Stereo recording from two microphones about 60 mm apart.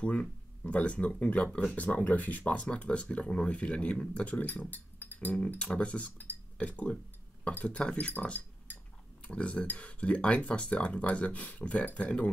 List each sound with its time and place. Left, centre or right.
0.0 s speech: left